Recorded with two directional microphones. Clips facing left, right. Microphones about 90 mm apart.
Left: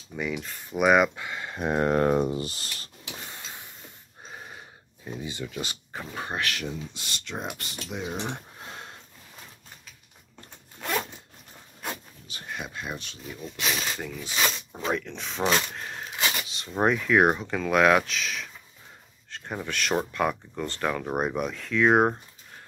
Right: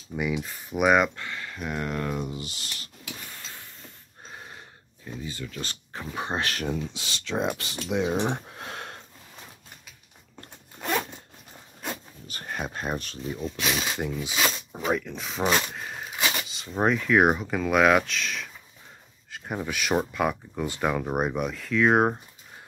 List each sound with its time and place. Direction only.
0.1 s speech: 10° right (ahead or behind); by 2.9 s 40° left (ahead or behind)
3.3 s a sound: 20° left (ahead or behind)
4.3 s a sound: centre (ahead or behind)
5.0 s speech: 20° left (ahead or behind)
6.1 s speech: 20° right (ahead or behind)
6.4 s speech: 40° right (ahead or behind)
7.0 s speech: 90° right; by 8.9 s 75° right (ahead or behind)
12.3 s speech: 45° right (ahead or behind)
13.4 s speech: 5° right (ahead or behind)
13.8 s speech: 15° right (ahead or behind)
15.7 s a sound: 5° right (ahead or behind)
16.4 s speech: centre (ahead or behind)